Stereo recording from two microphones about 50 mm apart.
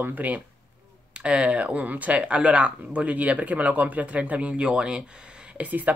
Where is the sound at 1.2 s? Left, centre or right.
Centre.